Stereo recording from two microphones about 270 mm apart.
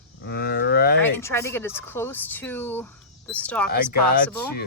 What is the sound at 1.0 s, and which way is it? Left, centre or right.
Speech, centre.